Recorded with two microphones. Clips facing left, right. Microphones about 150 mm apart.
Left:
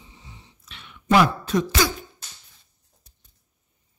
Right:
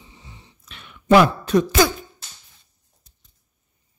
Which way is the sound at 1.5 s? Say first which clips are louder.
Right 5 dB; 65° right (ahead or behind).